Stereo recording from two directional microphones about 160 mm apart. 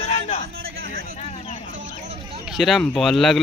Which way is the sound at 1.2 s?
45° left (ahead or behind).